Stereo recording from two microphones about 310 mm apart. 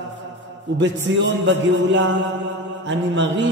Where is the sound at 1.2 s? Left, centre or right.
Right.